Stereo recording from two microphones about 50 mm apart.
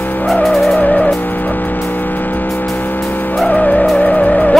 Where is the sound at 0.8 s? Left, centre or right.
Left.